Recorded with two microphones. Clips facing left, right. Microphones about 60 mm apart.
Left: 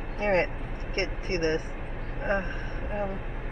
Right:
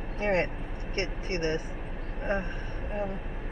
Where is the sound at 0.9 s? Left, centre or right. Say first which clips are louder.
Left 2 dB; left.